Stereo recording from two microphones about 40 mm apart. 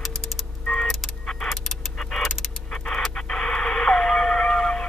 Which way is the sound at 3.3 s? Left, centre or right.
Left.